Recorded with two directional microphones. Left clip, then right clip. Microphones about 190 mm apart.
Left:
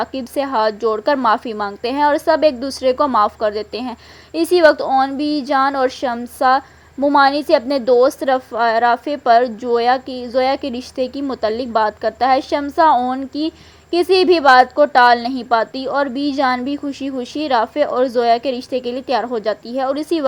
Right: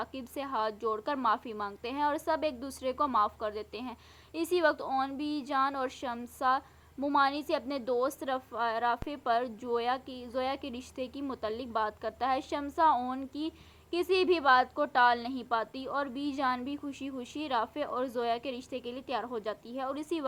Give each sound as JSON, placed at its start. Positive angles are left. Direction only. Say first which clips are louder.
{"t": 0.0, "sound": "a woman's voice", "louder": "left 17 dB", "side_deg": 35}